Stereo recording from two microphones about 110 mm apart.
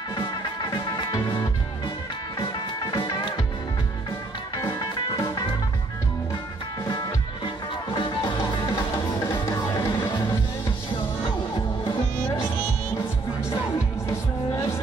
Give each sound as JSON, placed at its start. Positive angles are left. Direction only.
{"t": 0.7, "sound": "music", "side_deg": 45}
{"t": 2.3, "sound": "music", "side_deg": 30}
{"t": 3.0, "sound": "music", "side_deg": 45}
{"t": 4.6, "sound": "music", "side_deg": 35}
{"t": 7.4, "sound": "music", "side_deg": 50}
{"t": 9.3, "sound": "music", "side_deg": 30}
{"t": 9.9, "sound": "music", "side_deg": 40}